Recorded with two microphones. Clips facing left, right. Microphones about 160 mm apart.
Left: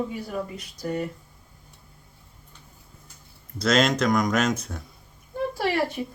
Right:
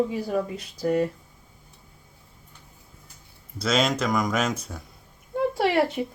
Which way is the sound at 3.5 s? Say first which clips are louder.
Left 2 dB; 5° right (ahead or behind).